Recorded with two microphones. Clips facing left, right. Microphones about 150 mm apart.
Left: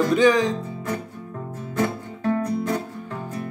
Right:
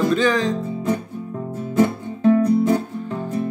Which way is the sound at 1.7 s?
25° right (ahead or behind).